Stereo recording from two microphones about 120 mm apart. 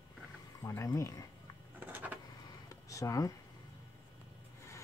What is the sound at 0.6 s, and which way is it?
Speech, 25° left (ahead or behind).